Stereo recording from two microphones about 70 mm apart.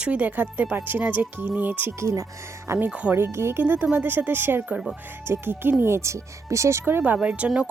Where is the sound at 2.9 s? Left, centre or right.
Centre.